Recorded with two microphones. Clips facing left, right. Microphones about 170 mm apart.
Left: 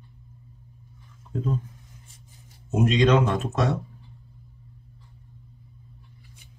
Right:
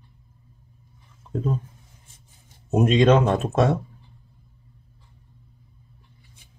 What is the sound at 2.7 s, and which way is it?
Speech, 50° right (ahead or behind).